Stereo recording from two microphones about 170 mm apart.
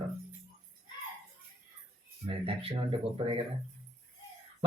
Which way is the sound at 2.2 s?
35° right (ahead or behind).